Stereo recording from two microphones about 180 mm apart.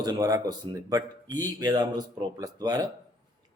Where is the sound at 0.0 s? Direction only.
20° right (ahead or behind).